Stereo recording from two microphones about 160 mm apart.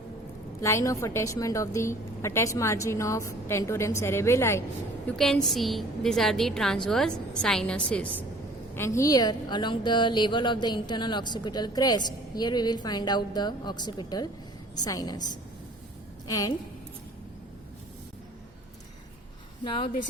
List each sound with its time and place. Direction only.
0.6 s a woman's voice: 20° left (ahead or behind)
5.0 s a woman's voice: centre (ahead or behind); by 15.2 s 25° left (ahead or behind)
16.2 s a woman's voice: 25° left (ahead or behind)
19.6 s speech: 30° left (ahead or behind)